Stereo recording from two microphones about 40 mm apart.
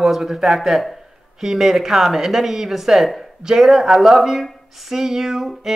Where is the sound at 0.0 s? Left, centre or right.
Centre.